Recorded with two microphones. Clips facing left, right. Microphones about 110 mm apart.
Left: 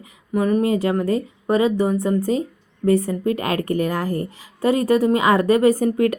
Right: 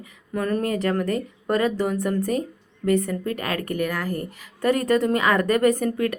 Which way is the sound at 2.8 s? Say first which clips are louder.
Left 4 dB; 20° left (ahead or behind).